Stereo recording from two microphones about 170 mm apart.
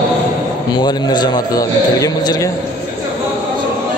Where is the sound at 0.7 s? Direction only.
25° left (ahead or behind).